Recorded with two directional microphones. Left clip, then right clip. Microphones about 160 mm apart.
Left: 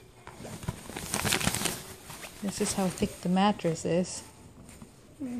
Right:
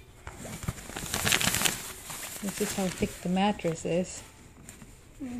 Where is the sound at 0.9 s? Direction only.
10° right (ahead or behind).